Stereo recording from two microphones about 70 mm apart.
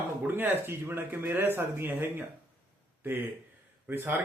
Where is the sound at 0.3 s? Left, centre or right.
Right.